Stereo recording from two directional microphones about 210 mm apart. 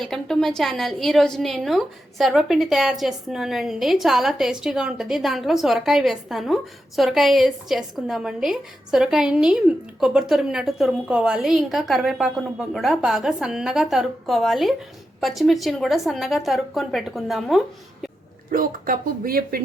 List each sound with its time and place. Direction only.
0.0 s a woman's voice: centre (ahead or behind)
18.5 s speech: 40° right (ahead or behind)